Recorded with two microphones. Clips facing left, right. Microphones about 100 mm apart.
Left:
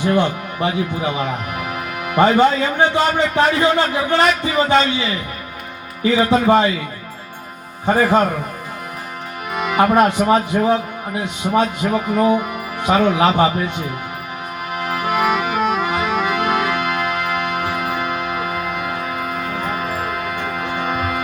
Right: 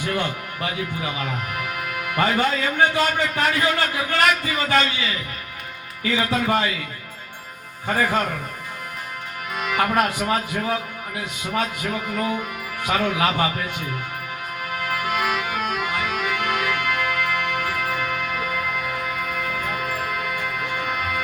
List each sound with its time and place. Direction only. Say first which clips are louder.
0.0 s speech: left 8 dB; 25° left (ahead or behind)
7.9 s speech: left 7 dB; 30° left (ahead or behind)
9.5 s speech: left 7 dB; 25° left (ahead or behind)
14.7 s music: left 5 dB; 25° left (ahead or behind)